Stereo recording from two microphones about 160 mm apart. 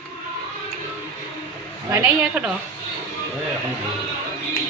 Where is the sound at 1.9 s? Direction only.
10° right (ahead or behind).